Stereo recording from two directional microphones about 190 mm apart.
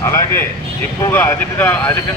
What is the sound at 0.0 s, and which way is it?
Speech, 15° left (ahead or behind).